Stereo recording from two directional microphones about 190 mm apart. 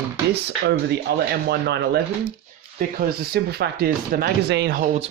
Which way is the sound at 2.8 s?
50° right (ahead or behind).